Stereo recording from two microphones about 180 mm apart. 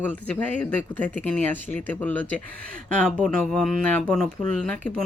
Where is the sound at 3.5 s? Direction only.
5° left (ahead or behind).